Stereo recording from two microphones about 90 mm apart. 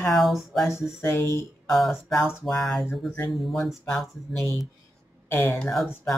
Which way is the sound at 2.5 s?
5° left (ahead or behind).